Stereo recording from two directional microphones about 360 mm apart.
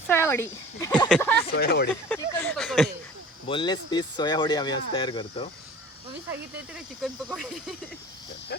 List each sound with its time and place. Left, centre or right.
0.1 s speech: centre
1.5 s speech: left
2.0 s speech: centre
3.4 s speech: centre
6.7 s speech: centre